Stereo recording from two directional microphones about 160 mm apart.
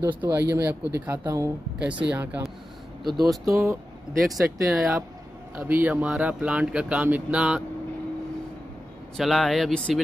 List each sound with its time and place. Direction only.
0.1 s speech: 10° right (ahead or behind)
3.4 s speech: 20° right (ahead or behind)
4.2 s speech: centre (ahead or behind)
9.1 s speech: centre (ahead or behind)